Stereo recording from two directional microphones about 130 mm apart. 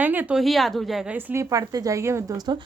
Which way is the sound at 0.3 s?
Centre (ahead or behind).